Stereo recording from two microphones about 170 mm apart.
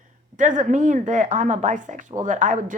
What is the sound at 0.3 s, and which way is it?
Speech, 50° right (ahead or behind).